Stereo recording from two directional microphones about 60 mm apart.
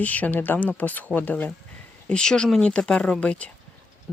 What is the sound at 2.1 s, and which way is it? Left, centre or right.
Speech, centre.